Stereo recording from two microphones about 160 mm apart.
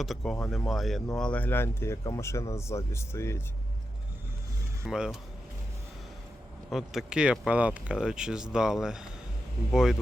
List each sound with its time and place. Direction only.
0.0 s speech: centre (ahead or behind); by 3.4 s 15° left (ahead or behind)
4.9 s speech: 5° right (ahead or behind)
6.7 s speech: centre (ahead or behind)